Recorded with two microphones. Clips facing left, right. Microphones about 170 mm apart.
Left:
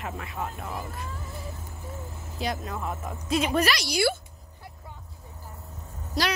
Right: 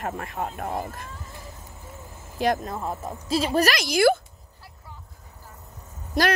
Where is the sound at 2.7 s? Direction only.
30° right (ahead or behind).